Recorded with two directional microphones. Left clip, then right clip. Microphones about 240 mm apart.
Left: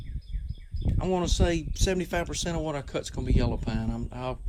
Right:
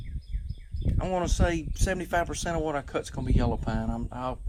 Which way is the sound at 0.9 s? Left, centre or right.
Right.